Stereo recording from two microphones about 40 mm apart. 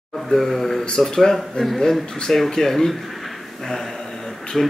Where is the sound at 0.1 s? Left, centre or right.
Centre.